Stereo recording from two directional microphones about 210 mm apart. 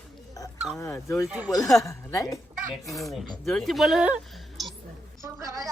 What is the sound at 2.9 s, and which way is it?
Speech, centre (ahead or behind).